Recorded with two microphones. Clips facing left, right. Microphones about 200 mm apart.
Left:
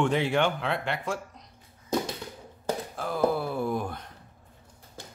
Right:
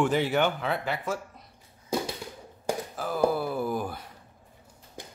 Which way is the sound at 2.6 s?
5° right (ahead or behind).